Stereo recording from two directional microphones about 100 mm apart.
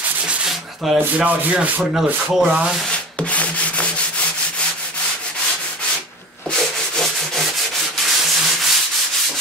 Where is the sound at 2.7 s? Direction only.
10° left (ahead or behind).